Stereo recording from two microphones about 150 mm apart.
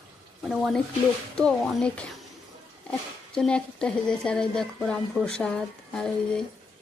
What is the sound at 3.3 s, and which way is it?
Speech, 5° left (ahead or behind).